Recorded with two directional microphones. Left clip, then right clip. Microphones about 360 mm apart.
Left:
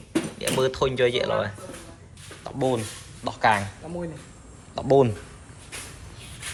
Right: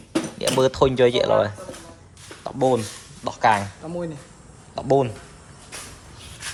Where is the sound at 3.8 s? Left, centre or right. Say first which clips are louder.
Right 4 dB; right.